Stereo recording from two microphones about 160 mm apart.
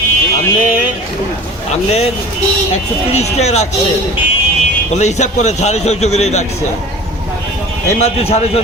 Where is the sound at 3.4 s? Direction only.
45° left (ahead or behind).